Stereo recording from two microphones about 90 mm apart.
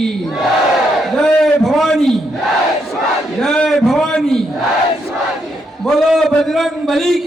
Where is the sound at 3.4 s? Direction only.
5° left (ahead or behind).